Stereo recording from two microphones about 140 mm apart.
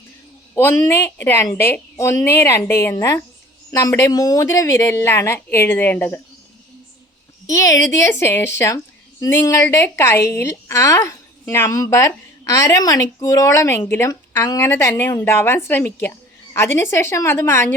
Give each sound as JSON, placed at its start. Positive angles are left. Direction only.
{"t": 0.5, "sound": "a woman's voice", "side_deg": 15}
{"t": 7.4, "sound": "speech", "side_deg": 20}